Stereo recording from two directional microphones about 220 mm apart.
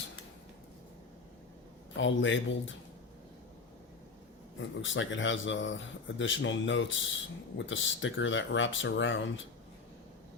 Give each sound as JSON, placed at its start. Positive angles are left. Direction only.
{"t": 2.0, "sound": "speech", "side_deg": 60}
{"t": 4.8, "sound": "speech", "side_deg": 60}